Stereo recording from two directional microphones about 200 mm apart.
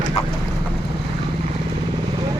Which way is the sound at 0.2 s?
30° left (ahead or behind).